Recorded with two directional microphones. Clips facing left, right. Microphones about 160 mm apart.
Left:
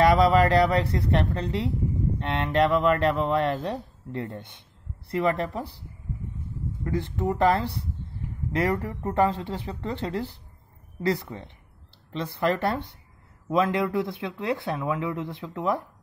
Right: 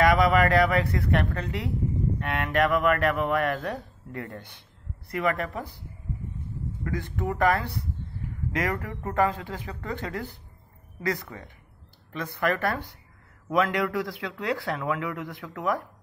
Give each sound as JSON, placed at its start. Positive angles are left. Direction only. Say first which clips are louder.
{"t": 0.0, "sound": "speech", "louder": "left 2 dB", "side_deg": 30}
{"t": 6.8, "sound": "speech", "louder": "left 4 dB", "side_deg": 25}
{"t": 9.1, "sound": "speech", "louder": "left 2 dB", "side_deg": 30}